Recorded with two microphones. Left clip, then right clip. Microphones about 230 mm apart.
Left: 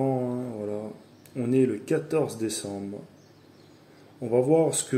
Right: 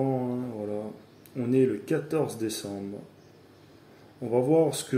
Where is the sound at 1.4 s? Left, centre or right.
Centre.